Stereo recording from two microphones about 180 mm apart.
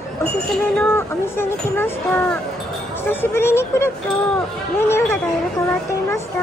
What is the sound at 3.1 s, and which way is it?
Speech, 10° left (ahead or behind).